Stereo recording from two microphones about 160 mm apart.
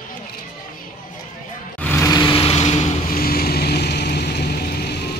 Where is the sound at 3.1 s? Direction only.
70° left (ahead or behind).